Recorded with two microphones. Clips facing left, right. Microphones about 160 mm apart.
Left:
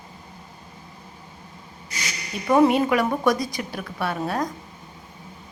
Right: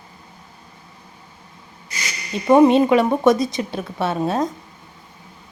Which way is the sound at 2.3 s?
25° right (ahead or behind).